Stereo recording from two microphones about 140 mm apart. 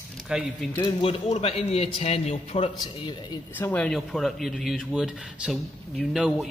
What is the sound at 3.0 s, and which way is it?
Speech, 35° left (ahead or behind).